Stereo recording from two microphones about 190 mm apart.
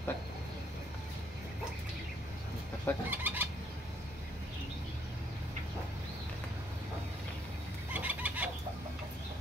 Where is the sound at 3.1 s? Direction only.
10° right (ahead or behind).